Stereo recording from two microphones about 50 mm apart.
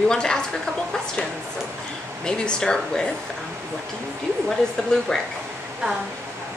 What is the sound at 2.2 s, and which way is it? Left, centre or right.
Speech, centre.